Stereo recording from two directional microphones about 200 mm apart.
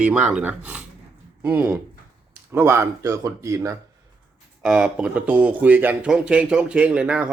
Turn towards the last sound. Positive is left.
turn(degrees=-5)  # may be behind; listen again after turning